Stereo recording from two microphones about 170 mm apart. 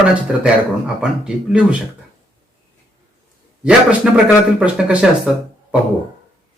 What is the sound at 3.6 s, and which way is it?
A man's voice, 5° right (ahead or behind).